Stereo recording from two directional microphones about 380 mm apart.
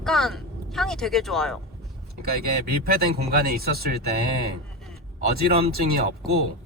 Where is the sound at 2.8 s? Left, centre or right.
Right.